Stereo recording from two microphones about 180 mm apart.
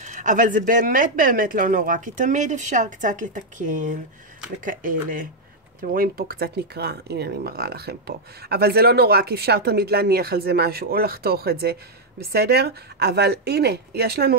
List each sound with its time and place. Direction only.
0.0 s speech: 45° right (ahead or behind); by 14.3 s 60° right (ahead or behind)